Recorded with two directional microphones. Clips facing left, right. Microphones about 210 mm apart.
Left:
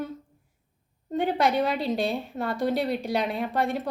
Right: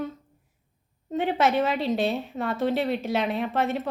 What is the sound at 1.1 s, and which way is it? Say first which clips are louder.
A woman's voice: right 1 dB; centre (ahead or behind).